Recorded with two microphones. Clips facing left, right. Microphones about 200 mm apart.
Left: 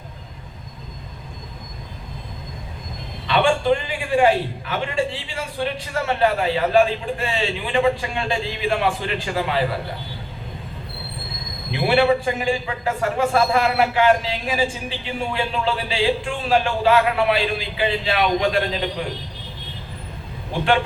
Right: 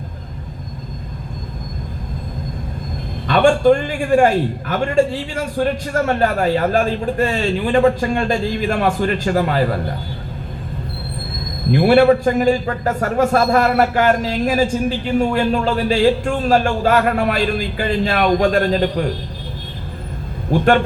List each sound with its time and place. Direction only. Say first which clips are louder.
3.2 s a man's voice: right 6 dB; 45° right (ahead or behind)
11.7 s a man's voice: right 6 dB; 45° right (ahead or behind)
20.5 s a man's voice: right 6 dB; 45° right (ahead or behind)